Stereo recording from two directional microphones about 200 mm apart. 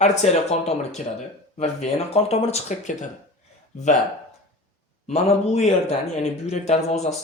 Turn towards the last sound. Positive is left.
turn(degrees=35)  # may be behind; listen again after turning